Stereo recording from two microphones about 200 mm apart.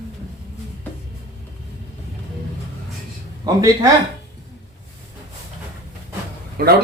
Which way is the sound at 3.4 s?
15° right (ahead or behind).